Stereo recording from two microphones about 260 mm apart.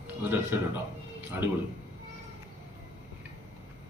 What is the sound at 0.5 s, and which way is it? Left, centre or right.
Speech, centre.